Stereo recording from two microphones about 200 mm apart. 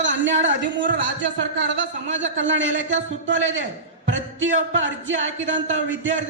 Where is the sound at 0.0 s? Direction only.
65° right (ahead or behind).